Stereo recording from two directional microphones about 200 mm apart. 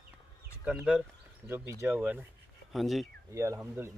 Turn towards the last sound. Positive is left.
turn(degrees=-15)  # may be behind; listen again after turning